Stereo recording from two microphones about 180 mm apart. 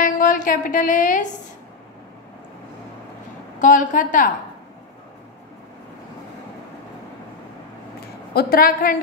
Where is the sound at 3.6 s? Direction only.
45° left (ahead or behind).